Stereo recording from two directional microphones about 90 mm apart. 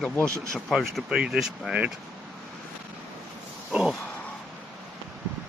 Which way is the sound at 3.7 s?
10° right (ahead or behind).